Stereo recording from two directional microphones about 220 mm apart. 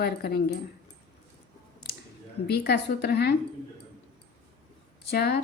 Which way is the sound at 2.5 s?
45° left (ahead or behind).